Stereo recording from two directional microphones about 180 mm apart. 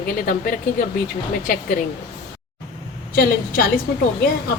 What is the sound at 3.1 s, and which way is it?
Speech, 55° left (ahead or behind).